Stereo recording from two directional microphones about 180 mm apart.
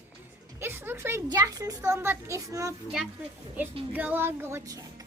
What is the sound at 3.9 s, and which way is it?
Music, 10° right (ahead or behind).